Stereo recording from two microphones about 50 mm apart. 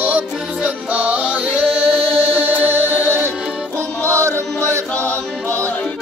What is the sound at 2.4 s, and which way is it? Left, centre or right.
Music, right.